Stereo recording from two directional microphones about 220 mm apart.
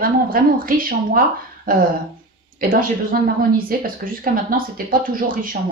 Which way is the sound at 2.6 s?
40° right (ahead or behind).